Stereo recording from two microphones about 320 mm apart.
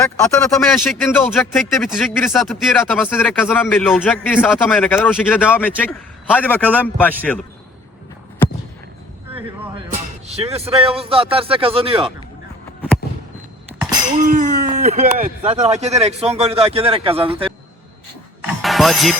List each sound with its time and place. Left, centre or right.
0.0 s speech: centre
9.9 s speech: centre
14.3 s speech: right
18.4 s music: centre